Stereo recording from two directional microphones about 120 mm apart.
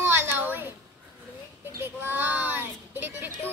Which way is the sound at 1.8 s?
20° right (ahead or behind).